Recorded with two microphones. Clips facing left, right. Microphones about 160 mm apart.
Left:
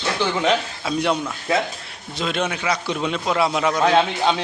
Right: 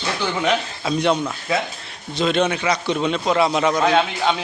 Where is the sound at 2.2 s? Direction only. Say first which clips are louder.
Right 5 dB; 5° left (ahead or behind).